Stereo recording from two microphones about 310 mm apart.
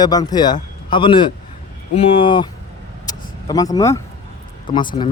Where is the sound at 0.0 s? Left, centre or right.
Centre.